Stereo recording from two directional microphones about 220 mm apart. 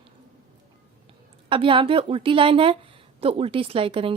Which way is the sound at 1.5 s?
25° right (ahead or behind).